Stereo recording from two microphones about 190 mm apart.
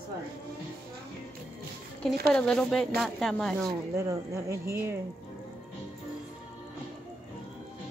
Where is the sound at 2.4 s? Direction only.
5° left (ahead or behind).